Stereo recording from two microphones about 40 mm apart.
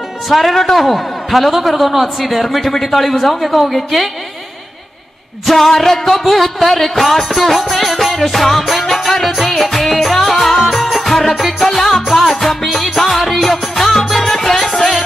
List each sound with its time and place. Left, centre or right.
0.3 s a man's voice: centre
5.5 s music: centre